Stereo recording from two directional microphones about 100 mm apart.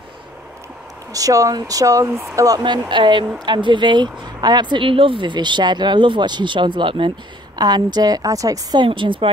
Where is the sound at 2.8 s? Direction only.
50° right (ahead or behind).